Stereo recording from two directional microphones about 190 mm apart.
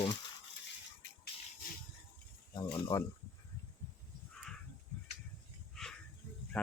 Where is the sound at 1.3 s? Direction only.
30° left (ahead or behind).